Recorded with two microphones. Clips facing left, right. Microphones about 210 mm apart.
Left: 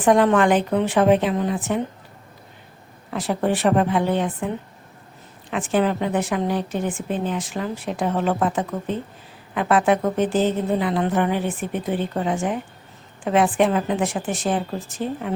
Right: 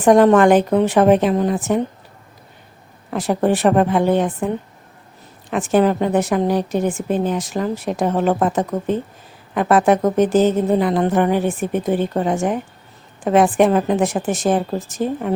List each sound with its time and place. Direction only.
0.0 s a woman's voice: 45° right (ahead or behind)
3.1 s a woman's voice: 45° right (ahead or behind)
5.5 s a woman's voice: 45° right (ahead or behind)